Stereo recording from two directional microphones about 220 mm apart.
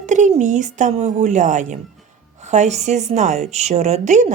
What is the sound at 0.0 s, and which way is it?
A woman's voice, 35° right (ahead or behind).